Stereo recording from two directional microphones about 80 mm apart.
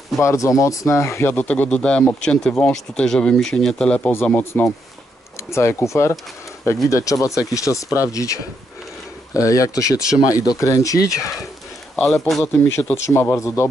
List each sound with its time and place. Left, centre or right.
0.2 s speech: left
1.3 s speech: centre
4.1 s speech: left
11.9 s a man's voice: centre
12.9 s speech: left